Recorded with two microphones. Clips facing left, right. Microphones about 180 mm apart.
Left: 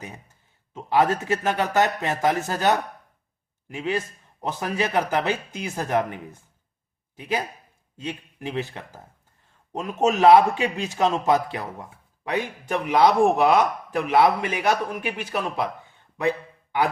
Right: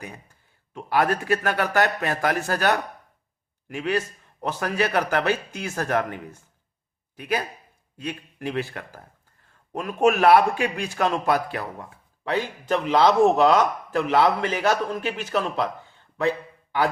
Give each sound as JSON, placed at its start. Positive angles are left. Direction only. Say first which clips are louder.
{"t": 0.7, "sound": "a man's voice", "louder": "left 1 dB", "side_deg": 20}